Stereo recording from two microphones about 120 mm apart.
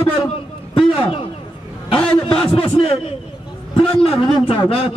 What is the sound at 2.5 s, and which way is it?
A man's voice, 50° left (ahead or behind).